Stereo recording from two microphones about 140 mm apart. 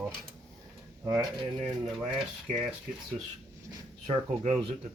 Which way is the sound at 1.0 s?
25° right (ahead or behind).